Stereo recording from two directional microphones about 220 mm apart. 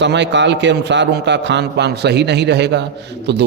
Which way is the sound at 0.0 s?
55° right (ahead or behind).